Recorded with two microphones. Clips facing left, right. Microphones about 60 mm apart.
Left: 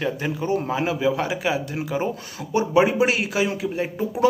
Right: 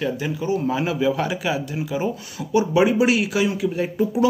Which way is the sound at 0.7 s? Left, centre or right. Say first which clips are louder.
Right 1 dB; left.